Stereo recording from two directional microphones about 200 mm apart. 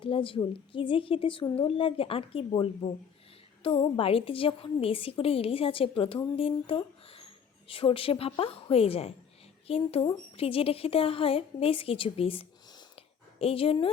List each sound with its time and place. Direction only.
0.0 s a woman's voice: 25° left (ahead or behind)